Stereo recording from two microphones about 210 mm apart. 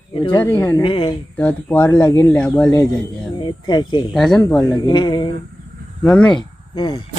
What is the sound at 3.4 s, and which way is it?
Speech, 20° left (ahead or behind).